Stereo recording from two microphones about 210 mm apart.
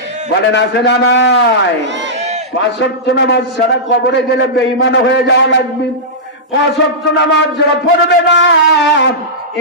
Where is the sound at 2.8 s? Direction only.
60° left (ahead or behind).